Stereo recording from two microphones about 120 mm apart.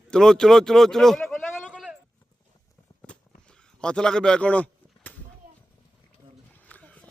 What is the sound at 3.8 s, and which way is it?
Speech, 5° left (ahead or behind).